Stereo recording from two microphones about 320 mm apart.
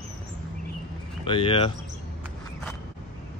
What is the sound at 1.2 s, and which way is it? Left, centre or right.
Speech, centre.